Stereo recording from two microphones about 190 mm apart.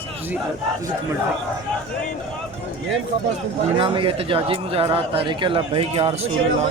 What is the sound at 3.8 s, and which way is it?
Speech, 30° right (ahead or behind).